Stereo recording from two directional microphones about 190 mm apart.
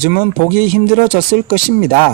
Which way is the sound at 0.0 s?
50° left (ahead or behind).